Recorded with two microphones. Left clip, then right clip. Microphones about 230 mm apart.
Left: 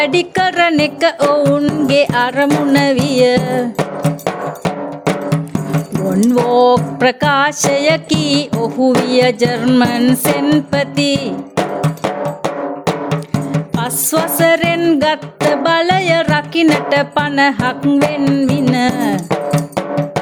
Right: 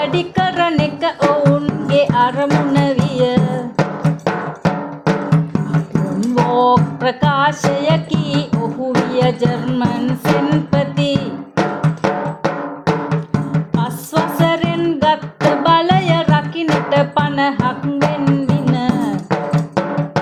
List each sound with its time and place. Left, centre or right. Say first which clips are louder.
0.0 s music: left 4 dB; left